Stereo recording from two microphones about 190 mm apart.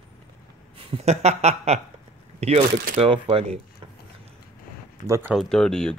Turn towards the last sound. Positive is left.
turn(degrees=5)  # may be behind; listen again after turning